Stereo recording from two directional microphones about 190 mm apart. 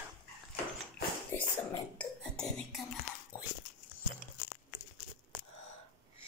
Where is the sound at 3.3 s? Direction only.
15° left (ahead or behind).